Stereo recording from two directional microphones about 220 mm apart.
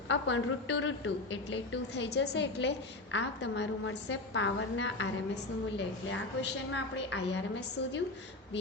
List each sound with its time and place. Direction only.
0.1 s a woman's voice: 55° left (ahead or behind)